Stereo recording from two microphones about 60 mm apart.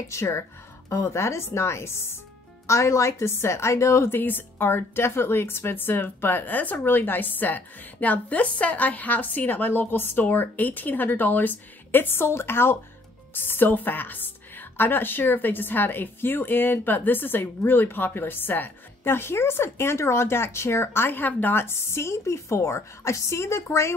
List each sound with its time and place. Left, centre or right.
0.1 s a woman's voice: left
2.6 s a woman's voice: left
4.2 s a woman's voice: left